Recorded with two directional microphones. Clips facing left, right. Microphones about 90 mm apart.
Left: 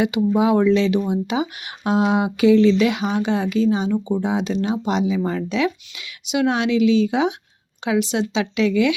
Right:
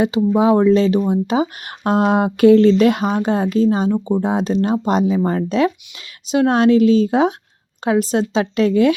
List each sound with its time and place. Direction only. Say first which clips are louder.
0.3 s speech: right 3 dB; 35° right (ahead or behind)